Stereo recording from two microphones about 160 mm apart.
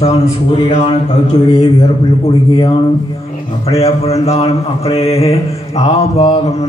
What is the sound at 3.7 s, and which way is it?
Speech, 40° left (ahead or behind).